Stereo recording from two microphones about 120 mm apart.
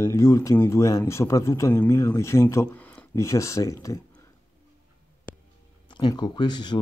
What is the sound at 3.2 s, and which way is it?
Speech, 25° left (ahead or behind).